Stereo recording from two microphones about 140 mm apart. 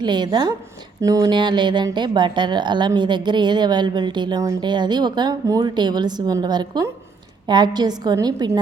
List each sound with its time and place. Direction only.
0.0 s a woman's voice: 30° right (ahead or behind)